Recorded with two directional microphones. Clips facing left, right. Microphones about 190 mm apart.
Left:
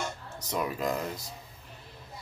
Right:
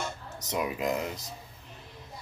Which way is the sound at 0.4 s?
20° right (ahead or behind).